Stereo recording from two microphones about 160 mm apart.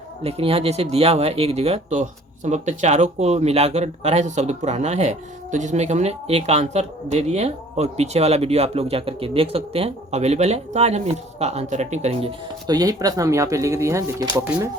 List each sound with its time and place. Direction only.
0.2 s speech: 40° right (ahead or behind)
12.6 s speech: 25° right (ahead or behind)